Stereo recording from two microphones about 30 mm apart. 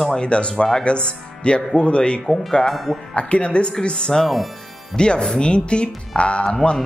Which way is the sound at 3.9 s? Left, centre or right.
Left.